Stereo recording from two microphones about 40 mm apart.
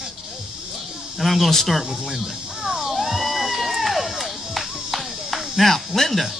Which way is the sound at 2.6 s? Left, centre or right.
Centre.